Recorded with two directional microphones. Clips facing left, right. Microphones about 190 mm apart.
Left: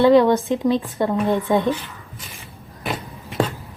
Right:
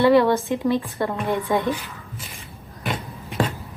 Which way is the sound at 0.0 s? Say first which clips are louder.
Left 3 dB; 15° left (ahead or behind).